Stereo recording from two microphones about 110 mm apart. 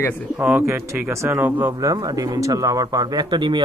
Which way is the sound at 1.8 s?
30° right (ahead or behind).